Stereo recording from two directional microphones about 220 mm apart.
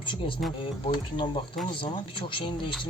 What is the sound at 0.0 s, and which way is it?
Speech, 20° left (ahead or behind).